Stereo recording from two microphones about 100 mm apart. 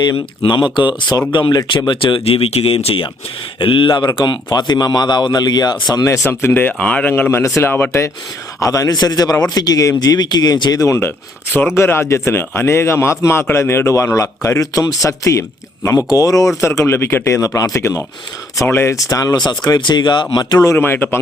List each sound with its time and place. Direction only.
0.4 s a man's voice: 45° left (ahead or behind)
1.9 s speech: 60° left (ahead or behind)
3.6 s a man's voice: 55° left (ahead or behind); by 6.1 s 40° left (ahead or behind)
6.1 s speech: 25° left (ahead or behind)
8.6 s a man's voice: 35° left (ahead or behind)
20.7 s speech: 20° left (ahead or behind)